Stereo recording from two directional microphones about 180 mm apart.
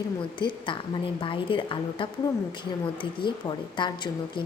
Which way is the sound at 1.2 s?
30° left (ahead or behind).